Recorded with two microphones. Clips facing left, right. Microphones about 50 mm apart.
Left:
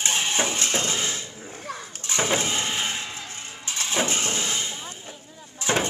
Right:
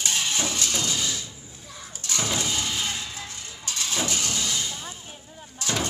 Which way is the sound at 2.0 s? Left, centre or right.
Left.